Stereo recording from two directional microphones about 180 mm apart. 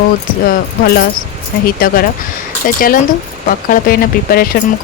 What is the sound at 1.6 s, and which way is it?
Speech, 55° left (ahead or behind).